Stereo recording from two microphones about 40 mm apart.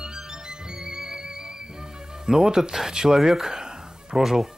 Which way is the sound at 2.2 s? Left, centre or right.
Centre.